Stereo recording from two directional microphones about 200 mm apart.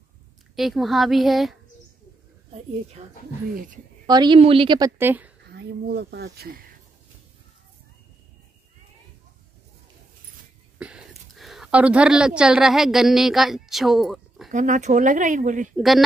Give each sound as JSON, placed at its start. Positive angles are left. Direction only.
{"t": 0.6, "sound": "a woman's voice", "side_deg": 0}
{"t": 3.5, "sound": "speech", "side_deg": -40}
{"t": 4.0, "sound": "a woman's voice", "side_deg": -20}
{"t": 5.5, "sound": "speech", "side_deg": -55}
{"t": 10.8, "sound": "speech", "side_deg": -5}
{"t": 14.5, "sound": "speech", "side_deg": -40}
{"t": 15.7, "sound": "a woman's voice", "side_deg": 0}